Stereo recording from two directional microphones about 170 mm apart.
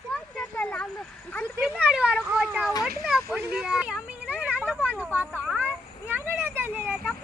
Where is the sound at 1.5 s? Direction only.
5° right (ahead or behind).